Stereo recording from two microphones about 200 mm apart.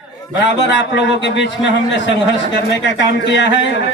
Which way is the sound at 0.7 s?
65° left (ahead or behind).